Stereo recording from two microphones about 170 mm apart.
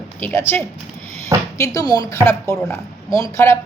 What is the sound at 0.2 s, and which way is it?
A woman's voice, 10° left (ahead or behind).